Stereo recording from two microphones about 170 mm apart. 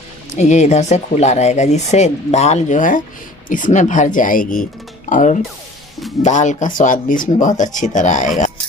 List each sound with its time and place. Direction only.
0.4 s speech: 45° left (ahead or behind)